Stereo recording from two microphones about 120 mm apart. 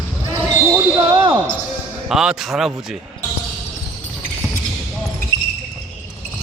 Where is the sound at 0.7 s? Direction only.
30° right (ahead or behind).